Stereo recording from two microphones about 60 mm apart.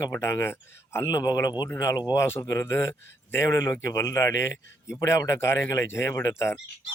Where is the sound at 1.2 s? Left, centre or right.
Left.